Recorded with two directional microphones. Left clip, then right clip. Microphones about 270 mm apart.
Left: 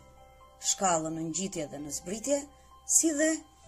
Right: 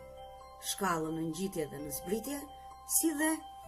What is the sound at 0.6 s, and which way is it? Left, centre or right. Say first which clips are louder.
Speech: left 5 dB; centre.